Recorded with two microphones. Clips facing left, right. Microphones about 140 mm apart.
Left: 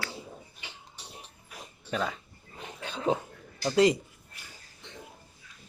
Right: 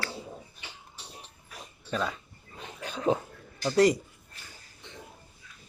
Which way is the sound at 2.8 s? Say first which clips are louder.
Right 2 dB; 30° left (ahead or behind).